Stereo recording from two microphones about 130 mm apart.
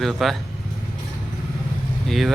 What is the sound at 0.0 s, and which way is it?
Speech, centre (ahead or behind).